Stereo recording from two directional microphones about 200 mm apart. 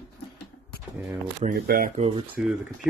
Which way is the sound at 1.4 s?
45° right (ahead or behind).